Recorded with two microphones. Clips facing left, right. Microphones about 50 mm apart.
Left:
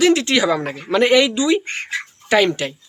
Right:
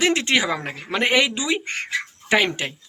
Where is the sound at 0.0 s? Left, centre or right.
Right.